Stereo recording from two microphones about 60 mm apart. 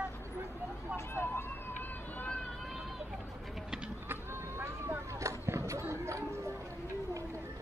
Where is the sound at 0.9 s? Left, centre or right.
Left.